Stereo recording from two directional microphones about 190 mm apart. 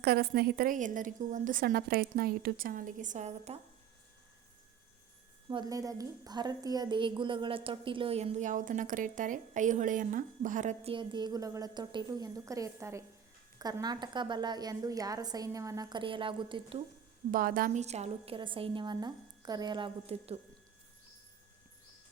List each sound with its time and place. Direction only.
0.0 s a woman's voice: 55° right (ahead or behind); by 3.6 s 35° right (ahead or behind)
5.5 s a woman's voice: 20° right (ahead or behind); by 10.9 s 40° right (ahead or behind)
10.9 s a woman's voice: 25° right (ahead or behind)
17.3 s a woman's voice: 45° right (ahead or behind); by 20.4 s 30° right (ahead or behind)